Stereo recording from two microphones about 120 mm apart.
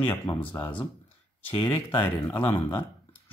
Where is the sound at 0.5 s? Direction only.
15° left (ahead or behind).